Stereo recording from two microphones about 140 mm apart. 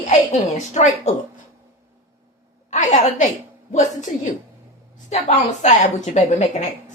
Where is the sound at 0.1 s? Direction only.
60° left (ahead or behind).